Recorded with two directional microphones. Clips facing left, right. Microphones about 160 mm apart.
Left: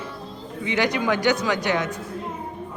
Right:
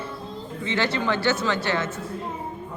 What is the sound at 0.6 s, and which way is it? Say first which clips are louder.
Speech: left 2 dB; 15° left (ahead or behind).